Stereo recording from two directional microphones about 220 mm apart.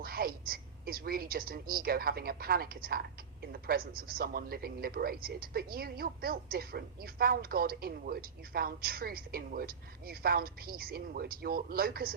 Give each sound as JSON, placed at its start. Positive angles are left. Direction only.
{"t": 0.0, "sound": "a woman's voice", "side_deg": -40}